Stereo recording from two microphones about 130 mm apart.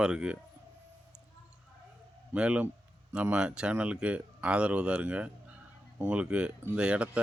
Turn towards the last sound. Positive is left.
turn(degrees=-10)  # may be behind; listen again after turning